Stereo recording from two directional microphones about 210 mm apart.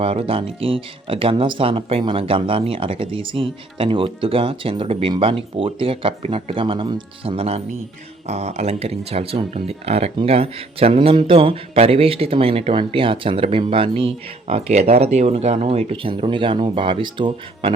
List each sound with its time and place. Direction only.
0.0 s speech: 25° right (ahead or behind)